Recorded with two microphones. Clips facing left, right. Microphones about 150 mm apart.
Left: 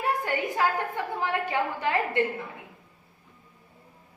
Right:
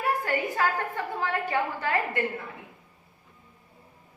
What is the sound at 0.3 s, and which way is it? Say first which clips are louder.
A woman's voice: even; 15° left (ahead or behind).